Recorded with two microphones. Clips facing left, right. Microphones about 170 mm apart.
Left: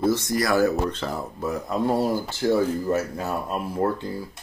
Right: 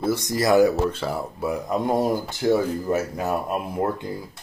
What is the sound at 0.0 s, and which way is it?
Speech, 15° right (ahead or behind).